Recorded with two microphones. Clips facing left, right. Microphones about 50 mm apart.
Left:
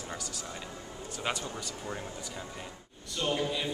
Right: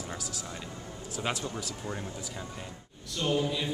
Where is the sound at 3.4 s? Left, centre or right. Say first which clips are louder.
Right 1 dB; centre.